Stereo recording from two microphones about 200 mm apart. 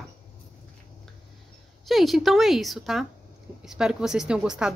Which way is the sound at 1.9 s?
Centre (ahead or behind).